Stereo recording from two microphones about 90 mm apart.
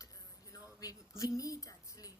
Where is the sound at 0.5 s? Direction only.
40° left (ahead or behind).